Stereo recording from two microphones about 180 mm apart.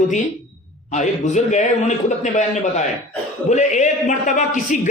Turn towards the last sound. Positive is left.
turn(degrees=45)  # may be behind; listen again after turning